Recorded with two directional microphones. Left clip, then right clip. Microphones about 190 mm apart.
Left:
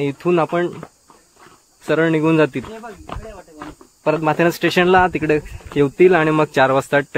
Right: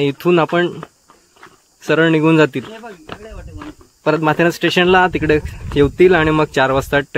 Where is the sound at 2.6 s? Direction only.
60° right (ahead or behind).